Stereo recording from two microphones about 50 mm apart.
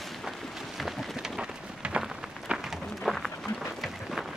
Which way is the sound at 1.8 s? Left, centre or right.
Right.